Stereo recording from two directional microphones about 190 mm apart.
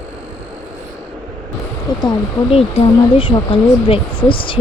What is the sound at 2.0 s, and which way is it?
Speech, 25° left (ahead or behind).